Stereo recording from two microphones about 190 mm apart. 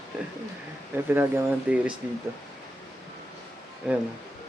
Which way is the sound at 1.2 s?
10° right (ahead or behind).